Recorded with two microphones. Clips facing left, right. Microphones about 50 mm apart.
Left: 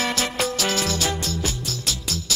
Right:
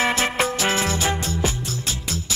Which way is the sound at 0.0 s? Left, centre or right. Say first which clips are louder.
Right 3 dB; right.